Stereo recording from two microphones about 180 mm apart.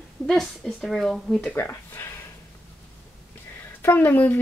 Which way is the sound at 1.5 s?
15° left (ahead or behind).